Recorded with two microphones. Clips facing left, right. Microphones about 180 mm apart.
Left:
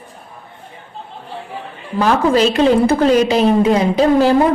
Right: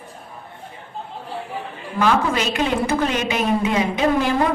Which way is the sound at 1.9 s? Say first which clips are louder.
Left 6 dB; 35° left (ahead or behind).